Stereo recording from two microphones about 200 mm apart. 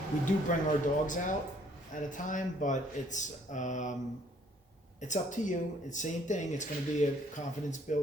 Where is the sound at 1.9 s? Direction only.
40° left (ahead or behind).